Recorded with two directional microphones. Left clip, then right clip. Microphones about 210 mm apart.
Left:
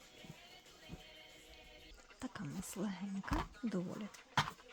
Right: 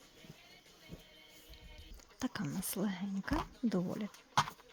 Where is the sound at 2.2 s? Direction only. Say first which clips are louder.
Right 7 dB; 35° right (ahead or behind).